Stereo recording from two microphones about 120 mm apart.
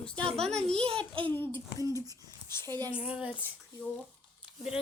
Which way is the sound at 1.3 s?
15° left (ahead or behind).